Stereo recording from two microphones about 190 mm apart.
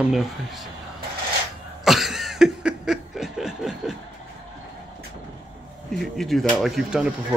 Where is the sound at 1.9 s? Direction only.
Centre (ahead or behind).